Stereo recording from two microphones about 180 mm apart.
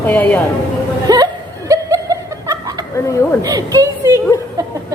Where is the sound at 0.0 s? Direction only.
10° left (ahead or behind).